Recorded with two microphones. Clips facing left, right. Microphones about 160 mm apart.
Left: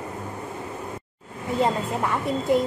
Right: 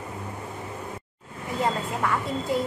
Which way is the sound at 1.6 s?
20° left (ahead or behind).